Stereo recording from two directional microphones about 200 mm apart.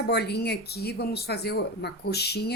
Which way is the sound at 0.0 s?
55° left (ahead or behind).